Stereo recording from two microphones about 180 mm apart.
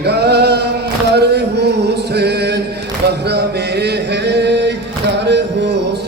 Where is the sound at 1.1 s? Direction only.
65° right (ahead or behind).